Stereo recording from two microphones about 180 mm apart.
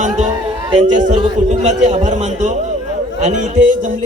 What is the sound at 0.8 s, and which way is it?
A man's voice, 40° right (ahead or behind).